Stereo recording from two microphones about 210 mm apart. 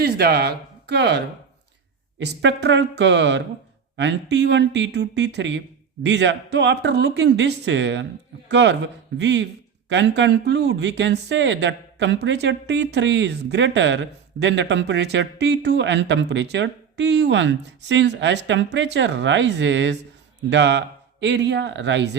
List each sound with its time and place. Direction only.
0.0 s speech: 50° right (ahead or behind)